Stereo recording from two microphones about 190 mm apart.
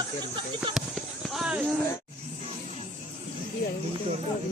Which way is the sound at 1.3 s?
5° right (ahead or behind).